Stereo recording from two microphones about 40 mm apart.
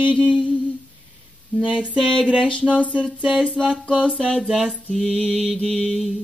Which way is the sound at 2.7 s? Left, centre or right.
Right.